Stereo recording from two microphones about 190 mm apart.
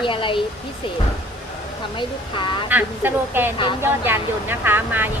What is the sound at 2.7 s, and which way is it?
Speech, 10° right (ahead or behind).